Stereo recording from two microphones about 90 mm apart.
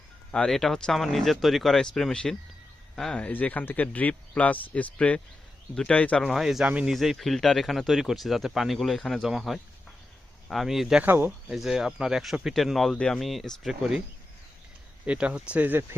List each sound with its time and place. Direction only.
0.3 s speech: 5° left (ahead or behind)
6.2 s speech: centre (ahead or behind)
6.7 s speech: 15° right (ahead or behind)
6.9 s speech: centre (ahead or behind)
11.0 s speech: 20° right (ahead or behind)
11.5 s speech: 5° right (ahead or behind)
15.0 s speech: 15° right (ahead or behind)